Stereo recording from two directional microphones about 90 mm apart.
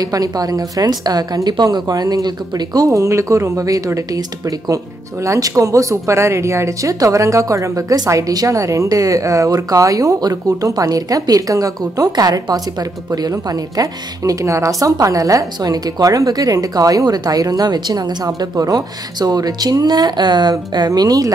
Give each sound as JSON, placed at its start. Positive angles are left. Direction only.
{"t": 0.0, "sound": "a woman's voice", "side_deg": -45}